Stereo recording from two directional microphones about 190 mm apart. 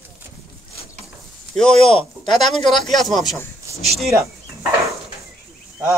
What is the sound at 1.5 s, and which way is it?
Speech, 5° left (ahead or behind).